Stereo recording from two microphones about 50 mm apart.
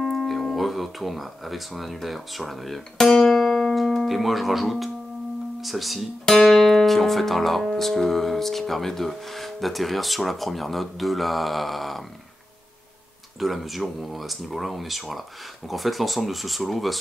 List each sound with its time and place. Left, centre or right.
0.0 s speech: centre
13.4 s speech: centre